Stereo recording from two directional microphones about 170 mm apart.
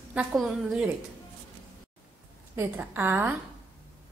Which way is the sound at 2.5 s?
10° right (ahead or behind).